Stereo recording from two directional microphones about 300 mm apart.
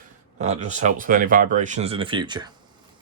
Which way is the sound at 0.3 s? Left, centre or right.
Right.